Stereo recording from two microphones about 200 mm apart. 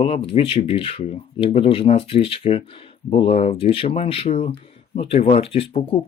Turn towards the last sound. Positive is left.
turn(degrees=30)  # may be behind; listen again after turning